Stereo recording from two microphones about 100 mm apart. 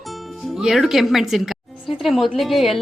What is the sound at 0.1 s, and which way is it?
Music, 5° right (ahead or behind).